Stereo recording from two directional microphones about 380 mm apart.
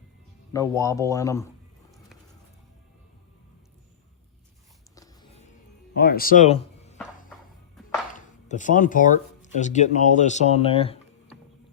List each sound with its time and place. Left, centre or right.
0.5 s a man's voice: centre
4.9 s a sound: centre
7.8 s music: centre
8.1 s speech: centre